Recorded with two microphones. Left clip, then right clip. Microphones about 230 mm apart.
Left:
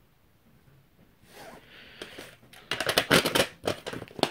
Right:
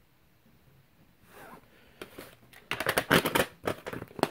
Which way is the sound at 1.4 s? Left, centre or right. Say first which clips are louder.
Left 4 dB; centre.